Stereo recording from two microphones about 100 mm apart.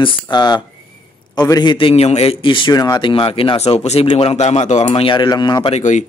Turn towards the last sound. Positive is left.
turn(degrees=45)  # may be behind; listen again after turning